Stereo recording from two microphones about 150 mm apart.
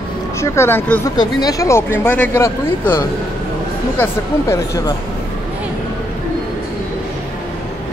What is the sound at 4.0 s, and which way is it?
Speech, 20° left (ahead or behind).